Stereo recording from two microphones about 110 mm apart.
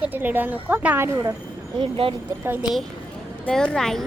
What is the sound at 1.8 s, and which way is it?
Speech, 55° right (ahead or behind).